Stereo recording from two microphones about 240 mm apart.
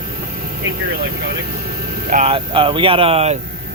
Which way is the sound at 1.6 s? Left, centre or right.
Right.